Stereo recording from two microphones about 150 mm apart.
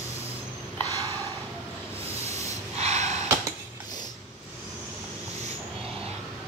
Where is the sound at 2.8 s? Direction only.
45° right (ahead or behind).